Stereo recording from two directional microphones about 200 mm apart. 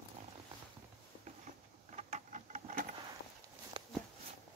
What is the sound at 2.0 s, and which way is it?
Patter, 35° right (ahead or behind).